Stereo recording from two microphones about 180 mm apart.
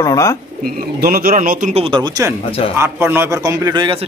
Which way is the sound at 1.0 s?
55° right (ahead or behind).